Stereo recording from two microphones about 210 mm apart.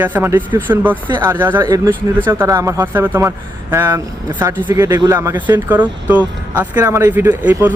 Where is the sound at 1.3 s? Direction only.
10° right (ahead or behind).